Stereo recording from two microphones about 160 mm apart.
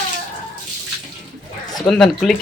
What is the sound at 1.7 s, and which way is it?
Speech, centre (ahead or behind).